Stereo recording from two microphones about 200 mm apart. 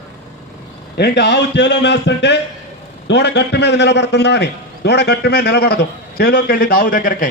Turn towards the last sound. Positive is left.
turn(degrees=45)  # may be behind; listen again after turning